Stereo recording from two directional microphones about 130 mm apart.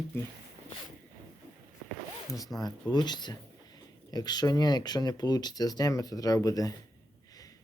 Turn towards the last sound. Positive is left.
turn(degrees=25)  # may be behind; listen again after turning